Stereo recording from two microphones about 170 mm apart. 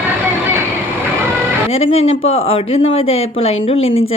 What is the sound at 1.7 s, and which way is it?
Speech, 35° left (ahead or behind).